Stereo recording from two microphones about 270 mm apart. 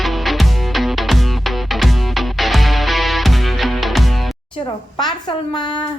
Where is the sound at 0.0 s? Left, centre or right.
Centre.